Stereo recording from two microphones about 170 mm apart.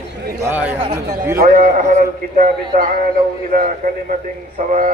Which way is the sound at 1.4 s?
50° right (ahead or behind).